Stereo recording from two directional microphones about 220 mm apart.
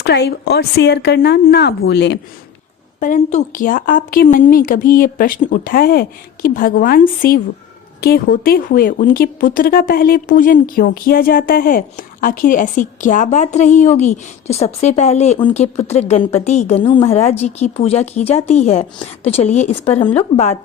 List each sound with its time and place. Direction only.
0.0 s speech: 50° left (ahead or behind)
3.0 s a woman's voice: 35° left (ahead or behind)